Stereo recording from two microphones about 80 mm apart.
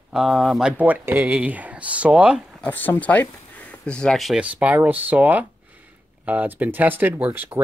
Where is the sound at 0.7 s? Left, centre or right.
Right.